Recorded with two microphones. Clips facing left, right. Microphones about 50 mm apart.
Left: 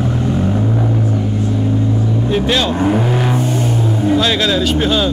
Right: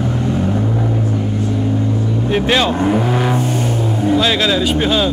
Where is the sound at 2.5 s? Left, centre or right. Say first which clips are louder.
Right 3 dB; right.